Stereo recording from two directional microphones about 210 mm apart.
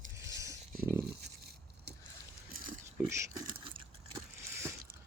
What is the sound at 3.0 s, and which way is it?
Speech, 15° right (ahead or behind).